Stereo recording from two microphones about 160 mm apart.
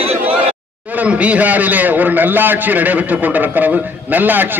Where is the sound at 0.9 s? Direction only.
10° right (ahead or behind).